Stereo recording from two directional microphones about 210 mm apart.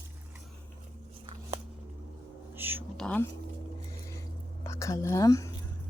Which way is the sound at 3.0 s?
5° left (ahead or behind).